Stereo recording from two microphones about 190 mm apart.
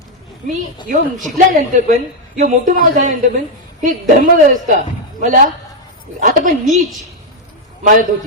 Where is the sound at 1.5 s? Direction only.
45° right (ahead or behind).